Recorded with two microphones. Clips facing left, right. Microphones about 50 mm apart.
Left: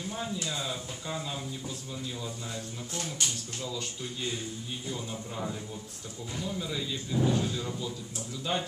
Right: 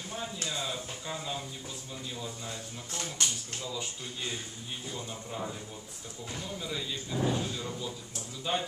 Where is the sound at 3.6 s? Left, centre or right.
Centre.